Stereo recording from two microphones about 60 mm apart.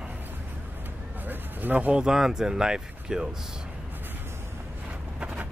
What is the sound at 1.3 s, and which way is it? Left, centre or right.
Speech, right.